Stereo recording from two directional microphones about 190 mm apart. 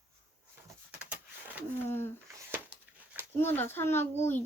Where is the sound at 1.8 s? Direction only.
10° left (ahead or behind).